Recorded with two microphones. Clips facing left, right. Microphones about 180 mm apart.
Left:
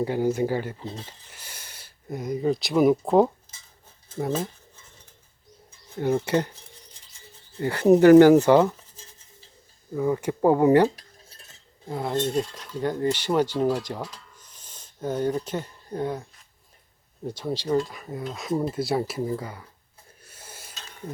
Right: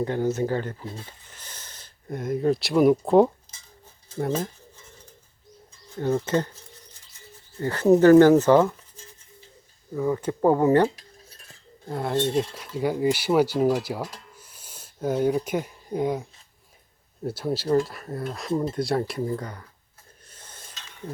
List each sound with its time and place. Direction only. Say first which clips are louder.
0.0 s speech: left 1 dB; 10° left (ahead or behind)
0.8 s speech: left 1 dB; 25° left (ahead or behind)
1.3 s speech: even; 10° left (ahead or behind)
6.0 s speech: left 1 dB; 15° left (ahead or behind)
7.6 s speech: left 1 dB; 15° left (ahead or behind)
9.9 s speech: left 1 dB; 10° left (ahead or behind)
11.9 s speech: right 1 dB; centre (ahead or behind)
17.2 s speech: right 2 dB; 5° right (ahead or behind)
20.2 s a sound: left 2 dB; 10° left (ahead or behind)
20.7 s a sound: even; 40° left (ahead or behind)